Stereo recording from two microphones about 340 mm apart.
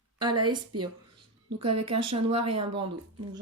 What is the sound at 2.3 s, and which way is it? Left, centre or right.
Speech, right.